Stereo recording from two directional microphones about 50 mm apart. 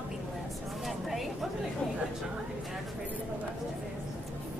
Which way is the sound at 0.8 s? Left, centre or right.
Centre.